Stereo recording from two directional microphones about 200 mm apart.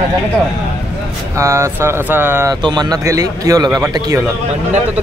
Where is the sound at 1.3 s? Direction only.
15° right (ahead or behind).